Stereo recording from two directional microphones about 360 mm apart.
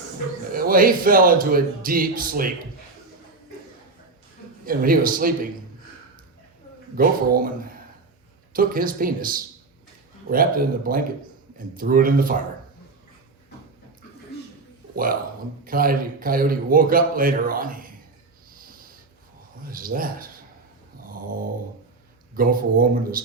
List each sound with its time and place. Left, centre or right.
0.5 s a man's voice: right
4.6 s a man's voice: right
6.9 s a man's voice: right
14.9 s a man's voice: right
18.5 s snort: right
19.6 s a man's voice: right
21.1 s dog: right
22.4 s a man's voice: right